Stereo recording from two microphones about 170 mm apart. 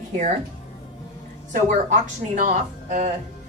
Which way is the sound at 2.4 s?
45° right (ahead or behind).